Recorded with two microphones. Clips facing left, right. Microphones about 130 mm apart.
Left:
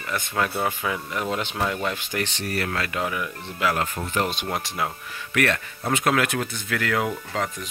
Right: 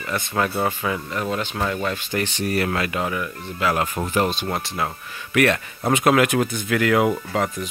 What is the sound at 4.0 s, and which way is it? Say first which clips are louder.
Speech: right 5 dB; 35° right (ahead or behind).